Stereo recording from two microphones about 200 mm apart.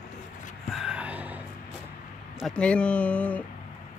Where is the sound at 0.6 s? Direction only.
Centre (ahead or behind).